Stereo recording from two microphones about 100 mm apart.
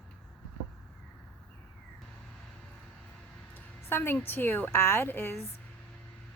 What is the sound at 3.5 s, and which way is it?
A woman's voice, 20° left (ahead or behind).